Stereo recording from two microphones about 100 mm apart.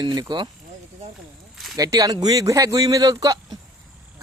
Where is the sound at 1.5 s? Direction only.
Centre (ahead or behind).